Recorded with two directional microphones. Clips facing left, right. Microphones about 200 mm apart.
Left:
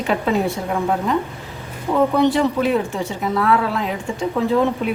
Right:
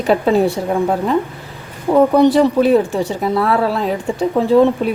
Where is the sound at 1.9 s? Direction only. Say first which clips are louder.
Right 6 dB; 40° right (ahead or behind).